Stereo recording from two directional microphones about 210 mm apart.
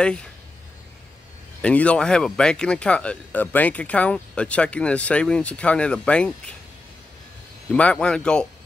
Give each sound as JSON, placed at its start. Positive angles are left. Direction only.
{"t": 0.0, "sound": "speech", "side_deg": 5}
{"t": 1.6, "sound": "speech", "side_deg": 5}
{"t": 7.7, "sound": "speech", "side_deg": 5}